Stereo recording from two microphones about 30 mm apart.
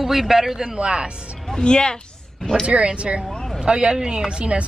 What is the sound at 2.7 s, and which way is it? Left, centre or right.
A woman's voice, right.